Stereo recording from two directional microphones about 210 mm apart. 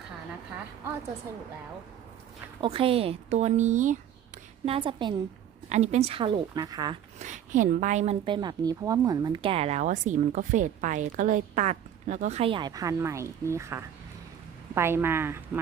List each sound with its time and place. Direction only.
2.6 s a woman's voice: 25° right (ahead or behind)
4.6 s a woman's voice: 25° right (ahead or behind)
7.2 s a woman's voice: 35° right (ahead or behind); by 15.4 s 10° right (ahead or behind)